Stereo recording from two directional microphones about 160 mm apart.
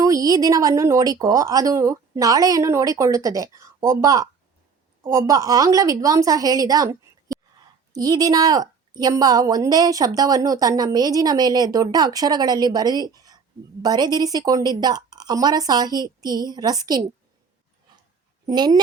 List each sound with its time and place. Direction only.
0.0 s a woman's voice: 20° right (ahead or behind)
7.9 s a woman's voice: 25° right (ahead or behind)
18.4 s a woman's voice: 25° right (ahead or behind)